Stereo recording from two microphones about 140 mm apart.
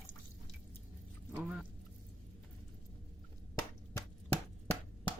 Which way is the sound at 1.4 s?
5° right (ahead or behind).